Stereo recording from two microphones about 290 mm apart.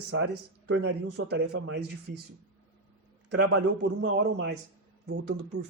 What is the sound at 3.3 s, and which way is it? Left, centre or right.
Speech, right.